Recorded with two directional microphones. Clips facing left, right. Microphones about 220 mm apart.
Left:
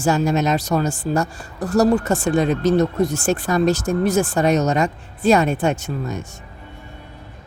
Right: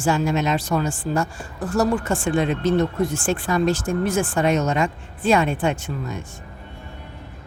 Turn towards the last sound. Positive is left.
turn(degrees=45)  # may be behind; listen again after turning